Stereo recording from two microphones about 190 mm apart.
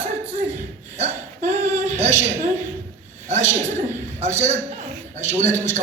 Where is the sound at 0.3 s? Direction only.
35° right (ahead or behind).